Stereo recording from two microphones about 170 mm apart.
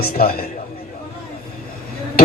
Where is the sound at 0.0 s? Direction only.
60° left (ahead or behind).